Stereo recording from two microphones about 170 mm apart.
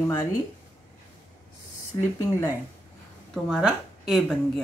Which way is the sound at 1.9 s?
25° left (ahead or behind).